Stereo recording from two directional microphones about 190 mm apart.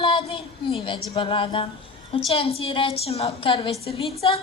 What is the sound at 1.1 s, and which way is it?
A woman's voice, 25° left (ahead or behind).